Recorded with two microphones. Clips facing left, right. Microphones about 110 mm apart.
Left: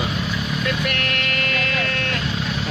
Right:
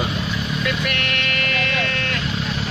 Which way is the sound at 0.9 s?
40° left (ahead or behind).